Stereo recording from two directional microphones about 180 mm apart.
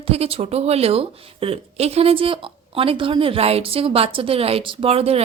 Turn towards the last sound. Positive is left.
turn(degrees=-35)  # may be behind; listen again after turning